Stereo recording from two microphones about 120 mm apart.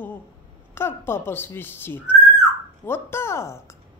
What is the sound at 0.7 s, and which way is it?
Speech, 20° left (ahead or behind).